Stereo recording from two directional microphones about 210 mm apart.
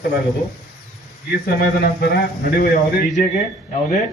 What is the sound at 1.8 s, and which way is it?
Speech, 45° left (ahead or behind).